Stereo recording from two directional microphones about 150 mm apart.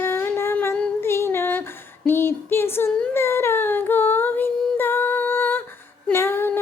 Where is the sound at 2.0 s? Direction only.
15° left (ahead or behind).